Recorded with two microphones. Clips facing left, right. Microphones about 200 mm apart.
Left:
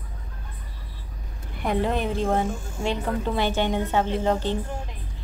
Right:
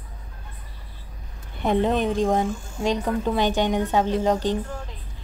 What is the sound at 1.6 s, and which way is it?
A woman's voice, 20° right (ahead or behind).